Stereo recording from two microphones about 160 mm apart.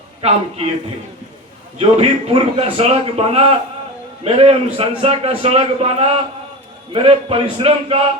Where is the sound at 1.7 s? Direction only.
40° right (ahead or behind).